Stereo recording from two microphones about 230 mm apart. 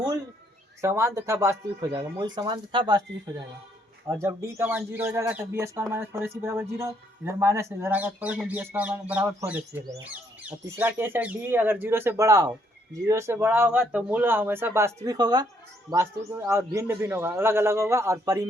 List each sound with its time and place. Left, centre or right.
0.8 s speech: centre
4.1 s speech: centre